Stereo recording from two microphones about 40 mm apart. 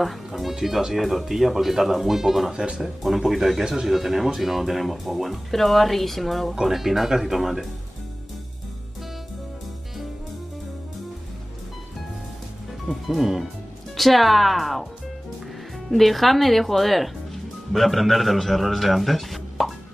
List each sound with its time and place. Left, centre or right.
0.0 s speech: centre
2.5 s speech: right
3.3 s speech: centre
6.5 s speech: centre
12.8 s speech: centre
15.9 s speech: centre